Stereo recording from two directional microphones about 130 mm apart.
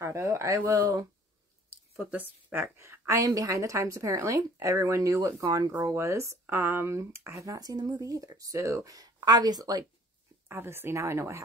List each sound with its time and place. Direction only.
0.0 s speech: 20° right (ahead or behind)
2.0 s speech: 15° right (ahead or behind); by 9.8 s 30° right (ahead or behind)
10.5 s speech: 15° right (ahead or behind)